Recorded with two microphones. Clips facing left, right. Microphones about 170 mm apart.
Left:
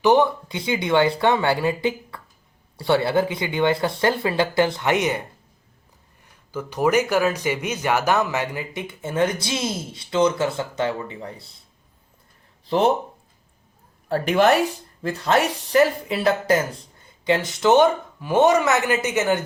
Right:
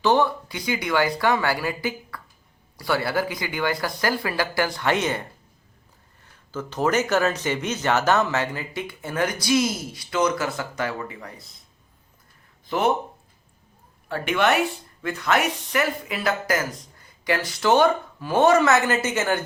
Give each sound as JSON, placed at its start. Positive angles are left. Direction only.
{"t": 0.0, "sound": "speech", "side_deg": 15}
{"t": 6.5, "sound": "speech", "side_deg": 15}
{"t": 12.6, "sound": "speech", "side_deg": 30}
{"t": 14.1, "sound": "speech", "side_deg": 35}